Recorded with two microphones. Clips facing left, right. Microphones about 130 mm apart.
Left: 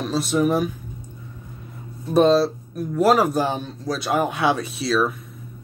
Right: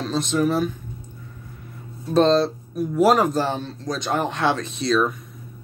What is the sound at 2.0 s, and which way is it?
Speech, 10° left (ahead or behind).